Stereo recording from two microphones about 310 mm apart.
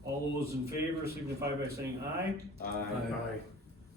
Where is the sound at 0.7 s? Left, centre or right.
Centre.